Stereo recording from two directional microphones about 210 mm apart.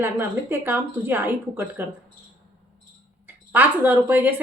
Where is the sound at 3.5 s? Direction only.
10° right (ahead or behind).